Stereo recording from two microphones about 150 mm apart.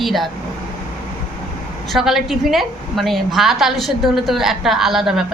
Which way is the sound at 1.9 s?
Centre (ahead or behind).